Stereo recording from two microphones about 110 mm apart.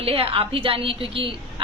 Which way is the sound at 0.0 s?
60° right (ahead or behind).